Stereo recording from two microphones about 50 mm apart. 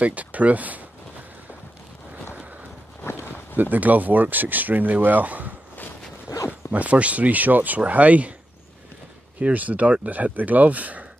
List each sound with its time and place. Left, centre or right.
0.0 s speech: right
3.0 s a sound: left
3.7 s speech: right
6.7 s speech: right
9.4 s speech: right